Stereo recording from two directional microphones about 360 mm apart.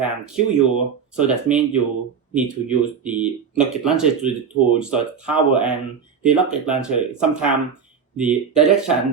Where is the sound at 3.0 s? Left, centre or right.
Centre.